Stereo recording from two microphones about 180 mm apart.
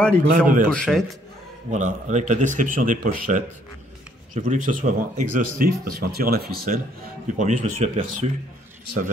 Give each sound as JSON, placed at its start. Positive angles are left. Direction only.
{"t": 0.3, "sound": "speech", "side_deg": -50}
{"t": 0.7, "sound": "a man's voice", "side_deg": 5}
{"t": 1.7, "sound": "speech", "side_deg": -40}
{"t": 7.3, "sound": "speech", "side_deg": -45}